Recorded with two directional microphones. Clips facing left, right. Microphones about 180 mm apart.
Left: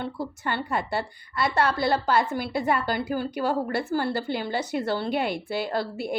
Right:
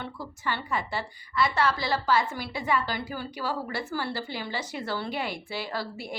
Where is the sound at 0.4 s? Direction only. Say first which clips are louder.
Left 2 dB; 55° left (ahead or behind).